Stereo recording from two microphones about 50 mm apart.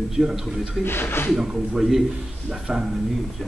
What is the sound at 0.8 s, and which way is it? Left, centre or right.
Speech, left.